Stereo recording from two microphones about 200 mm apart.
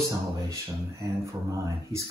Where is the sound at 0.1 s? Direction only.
15° right (ahead or behind).